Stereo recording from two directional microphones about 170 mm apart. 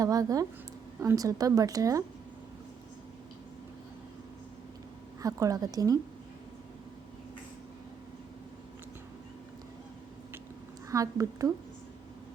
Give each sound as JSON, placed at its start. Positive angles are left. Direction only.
{"t": 0.0, "sound": "a woman's voice", "side_deg": -20}
{"t": 5.2, "sound": "a woman's voice", "side_deg": -20}
{"t": 10.8, "sound": "a woman's voice", "side_deg": -20}